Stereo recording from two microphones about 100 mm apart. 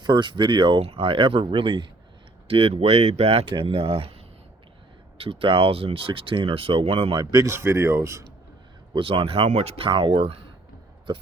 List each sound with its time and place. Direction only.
0.0 s speech: 50° right (ahead or behind)
0.8 s speech: 70° right (ahead or behind)
2.5 s speech: 75° right (ahead or behind)
3.5 s speech: 65° right (ahead or behind)
5.1 s speech: 65° right (ahead or behind); by 7.1 s 80° right
7.1 s speech: 40° right (ahead or behind)
7.5 s speech: 25° right (ahead or behind)
8.9 s speech: 60° right (ahead or behind)